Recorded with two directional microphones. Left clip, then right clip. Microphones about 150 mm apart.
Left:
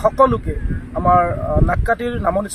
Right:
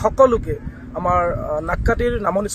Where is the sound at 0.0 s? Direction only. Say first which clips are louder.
Even; 40° right (ahead or behind).